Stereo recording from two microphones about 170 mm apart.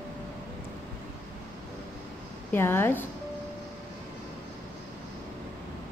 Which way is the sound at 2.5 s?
15° left (ahead or behind).